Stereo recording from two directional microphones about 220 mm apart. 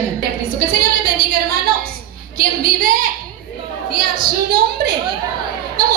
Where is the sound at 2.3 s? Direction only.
40° right (ahead or behind).